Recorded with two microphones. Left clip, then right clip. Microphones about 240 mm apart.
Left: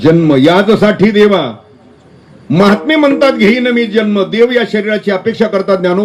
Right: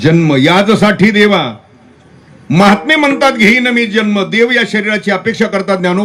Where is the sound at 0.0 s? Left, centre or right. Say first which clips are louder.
Left 2 dB; right.